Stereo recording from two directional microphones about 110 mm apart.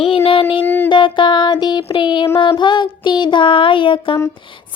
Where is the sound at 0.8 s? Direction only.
45° left (ahead or behind).